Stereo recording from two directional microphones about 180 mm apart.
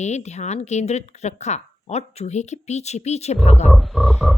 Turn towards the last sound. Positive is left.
turn(degrees=-5)  # may be behind; listen again after turning